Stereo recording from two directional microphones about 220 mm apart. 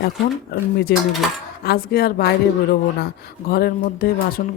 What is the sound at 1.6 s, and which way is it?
Speech, 45° left (ahead or behind).